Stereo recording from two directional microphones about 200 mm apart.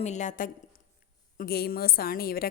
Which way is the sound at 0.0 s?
35° left (ahead or behind).